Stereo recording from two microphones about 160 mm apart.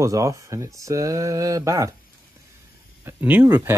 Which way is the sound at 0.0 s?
20° right (ahead or behind).